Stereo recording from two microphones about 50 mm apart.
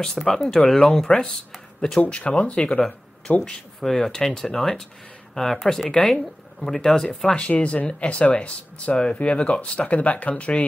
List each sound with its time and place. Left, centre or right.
0.0 s speech: centre
2.0 s speech: left
3.4 s speech: centre
7.3 s speech: left